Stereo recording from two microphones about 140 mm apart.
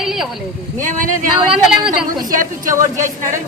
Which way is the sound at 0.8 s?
65° right (ahead or behind).